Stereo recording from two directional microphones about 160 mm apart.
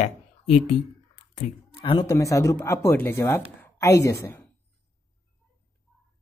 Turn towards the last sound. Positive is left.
turn(degrees=15)  # may be behind; listen again after turning